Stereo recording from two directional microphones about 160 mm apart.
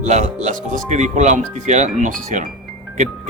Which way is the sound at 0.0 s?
45° right (ahead or behind).